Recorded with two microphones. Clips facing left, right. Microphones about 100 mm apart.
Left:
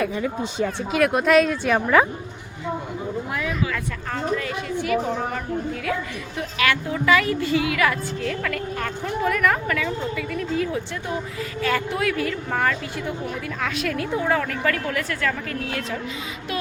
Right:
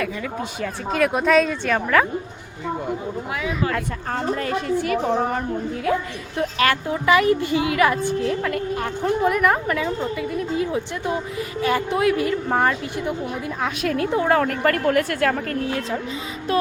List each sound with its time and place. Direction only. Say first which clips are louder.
0.0 s speech: left 2 dB; 25° left (ahead or behind)
0.9 s speech: right 1 dB; centre (ahead or behind)
3.7 s a woman's voice: right 3 dB; 40° right (ahead or behind)
14.3 s a woman's voice: right 3 dB; 50° right (ahead or behind)